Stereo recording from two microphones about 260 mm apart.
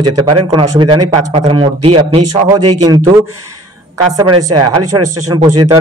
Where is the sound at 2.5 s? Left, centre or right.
Right.